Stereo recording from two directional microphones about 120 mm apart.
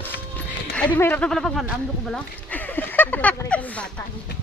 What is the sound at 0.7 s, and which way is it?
Speech, 15° left (ahead or behind).